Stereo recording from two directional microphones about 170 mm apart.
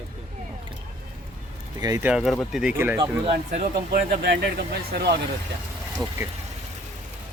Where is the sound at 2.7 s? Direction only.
10° right (ahead or behind).